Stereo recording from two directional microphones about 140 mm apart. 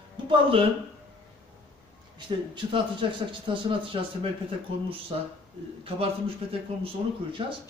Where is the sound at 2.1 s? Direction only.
35° right (ahead or behind).